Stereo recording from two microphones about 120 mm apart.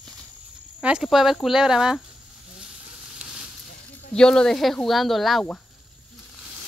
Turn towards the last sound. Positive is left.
turn(degrees=0)  # may be behind; listen again after turning